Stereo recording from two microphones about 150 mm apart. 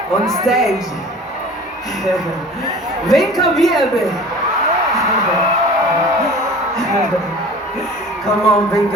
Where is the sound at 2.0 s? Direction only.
Centre (ahead or behind).